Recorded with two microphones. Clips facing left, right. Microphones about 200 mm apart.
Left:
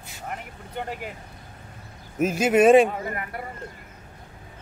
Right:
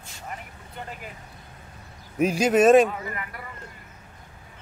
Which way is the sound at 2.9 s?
45° left (ahead or behind).